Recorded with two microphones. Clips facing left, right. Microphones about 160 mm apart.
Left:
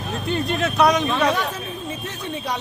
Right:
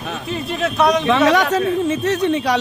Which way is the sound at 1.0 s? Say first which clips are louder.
Right 6 dB; 85° right.